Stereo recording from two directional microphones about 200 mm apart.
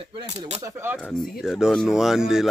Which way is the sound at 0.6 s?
15° right (ahead or behind).